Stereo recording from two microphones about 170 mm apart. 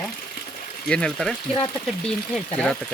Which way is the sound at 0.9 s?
5° left (ahead or behind).